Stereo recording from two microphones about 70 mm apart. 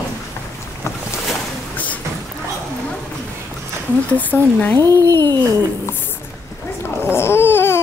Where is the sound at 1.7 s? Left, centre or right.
Left.